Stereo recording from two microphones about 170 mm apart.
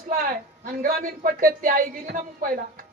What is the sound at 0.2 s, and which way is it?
Speech, 55° right (ahead or behind).